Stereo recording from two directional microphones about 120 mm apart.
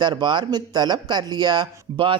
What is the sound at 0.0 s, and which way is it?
Speech, 40° right (ahead or behind).